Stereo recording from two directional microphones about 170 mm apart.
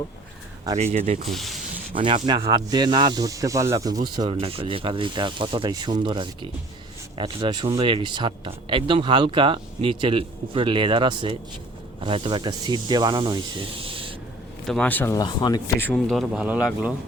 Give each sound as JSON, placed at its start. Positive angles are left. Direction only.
{"t": 0.8, "sound": "speech", "side_deg": -40}
{"t": 1.3, "sound": "speech", "side_deg": 0}
{"t": 1.9, "sound": "speech", "side_deg": -30}
{"t": 14.7, "sound": "speech", "side_deg": 10}
{"t": 15.1, "sound": "speech", "side_deg": 25}
{"t": 15.8, "sound": "speech", "side_deg": 5}